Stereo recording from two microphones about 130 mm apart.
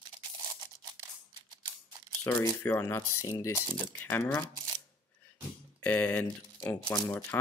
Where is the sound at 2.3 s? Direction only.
20° left (ahead or behind).